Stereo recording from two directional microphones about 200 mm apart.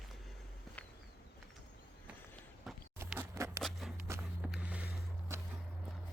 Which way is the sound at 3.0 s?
10° right (ahead or behind).